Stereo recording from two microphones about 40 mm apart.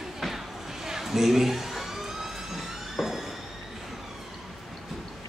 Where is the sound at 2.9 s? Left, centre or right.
Centre.